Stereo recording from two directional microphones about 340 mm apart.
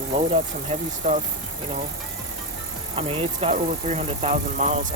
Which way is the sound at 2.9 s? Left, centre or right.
Centre.